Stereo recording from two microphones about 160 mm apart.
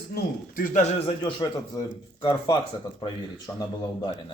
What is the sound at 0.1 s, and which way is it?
A man's voice, 70° left (ahead or behind).